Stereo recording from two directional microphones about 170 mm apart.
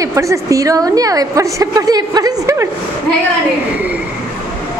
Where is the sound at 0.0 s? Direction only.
20° right (ahead or behind).